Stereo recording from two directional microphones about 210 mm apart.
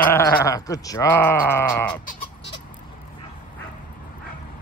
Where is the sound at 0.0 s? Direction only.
10° left (ahead or behind).